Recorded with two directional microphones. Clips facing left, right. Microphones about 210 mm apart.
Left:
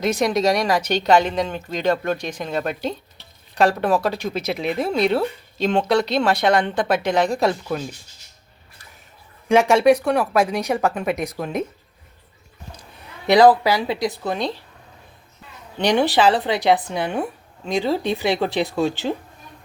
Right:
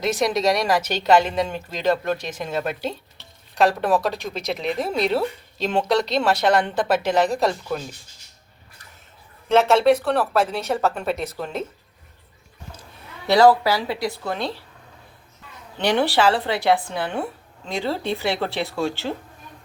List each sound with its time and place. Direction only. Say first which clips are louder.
0.0 s a woman's voice: left 2 dB; centre (ahead or behind)
9.5 s speech: left 2 dB; 15° left (ahead or behind)
13.2 s speech: left 2 dB; 15° left (ahead or behind)
15.8 s speech: left 2 dB; 15° left (ahead or behind)